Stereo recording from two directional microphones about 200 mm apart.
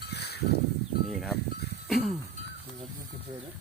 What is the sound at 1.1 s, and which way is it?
Speech, centre (ahead or behind).